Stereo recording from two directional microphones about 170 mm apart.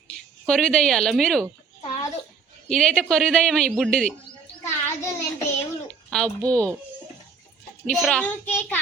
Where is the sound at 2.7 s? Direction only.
5° left (ahead or behind).